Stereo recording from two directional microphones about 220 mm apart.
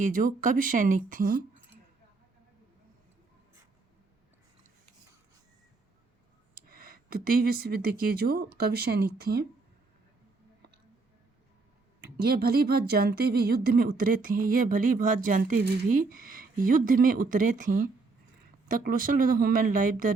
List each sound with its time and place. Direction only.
0.0 s a woman's voice: 35° right (ahead or behind)
6.5 s speech: 40° right (ahead or behind)
12.1 s a woman's voice: 45° right (ahead or behind)